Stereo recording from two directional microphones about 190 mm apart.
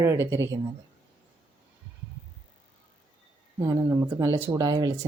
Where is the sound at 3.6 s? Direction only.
15° right (ahead or behind).